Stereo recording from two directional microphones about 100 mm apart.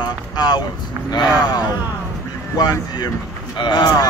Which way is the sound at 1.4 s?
40° left (ahead or behind).